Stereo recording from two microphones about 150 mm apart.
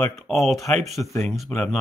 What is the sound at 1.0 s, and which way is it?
Speech, 15° left (ahead or behind).